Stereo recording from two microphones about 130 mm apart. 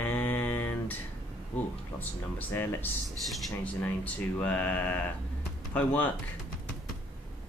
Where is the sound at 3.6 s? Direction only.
10° left (ahead or behind).